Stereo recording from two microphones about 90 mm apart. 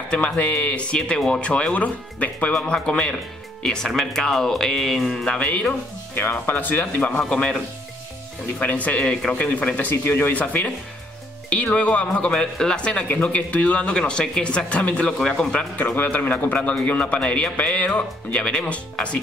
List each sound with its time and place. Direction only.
0.1 s speech: 15° left (ahead or behind)
8.5 s speech: 15° left (ahead or behind)